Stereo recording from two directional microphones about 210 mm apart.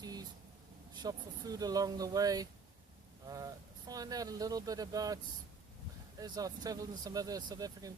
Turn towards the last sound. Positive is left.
turn(degrees=-15)  # may be behind; listen again after turning